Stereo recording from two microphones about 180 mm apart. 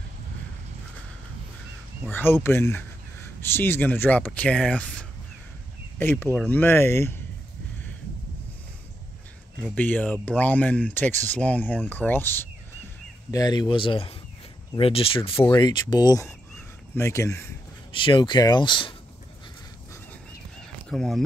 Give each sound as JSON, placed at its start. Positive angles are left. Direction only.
{"t": 2.0, "sound": "speech", "side_deg": 10}
{"t": 9.8, "sound": "speech", "side_deg": 10}
{"t": 13.3, "sound": "speech", "side_deg": 20}
{"t": 16.5, "sound": "a sound", "side_deg": 15}
{"t": 17.9, "sound": "speech", "side_deg": 25}
{"t": 20.9, "sound": "speech", "side_deg": 0}